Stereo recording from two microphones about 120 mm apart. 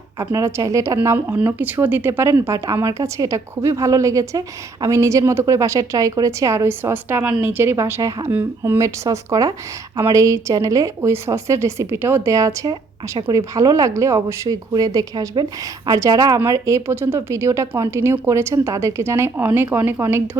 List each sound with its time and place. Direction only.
0.3 s speech: 25° right (ahead or behind)